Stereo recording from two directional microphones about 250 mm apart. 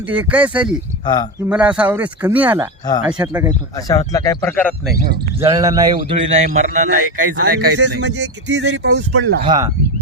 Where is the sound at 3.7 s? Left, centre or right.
Centre.